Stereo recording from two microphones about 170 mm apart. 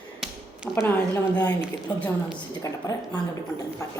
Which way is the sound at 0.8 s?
15° left (ahead or behind).